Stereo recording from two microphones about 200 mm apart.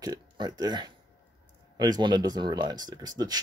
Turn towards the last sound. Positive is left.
turn(degrees=-20)  # may be behind; listen again after turning